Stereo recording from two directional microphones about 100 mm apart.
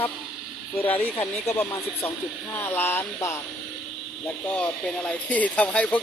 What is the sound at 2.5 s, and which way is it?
Speech, 20° left (ahead or behind).